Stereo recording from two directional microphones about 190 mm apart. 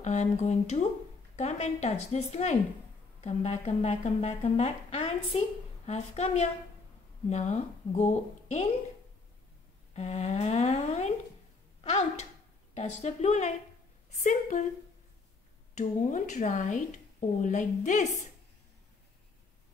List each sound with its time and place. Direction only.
0.0 s speech: 35° left (ahead or behind)
9.9 s speech: 35° left (ahead or behind)
15.7 s speech: 40° left (ahead or behind)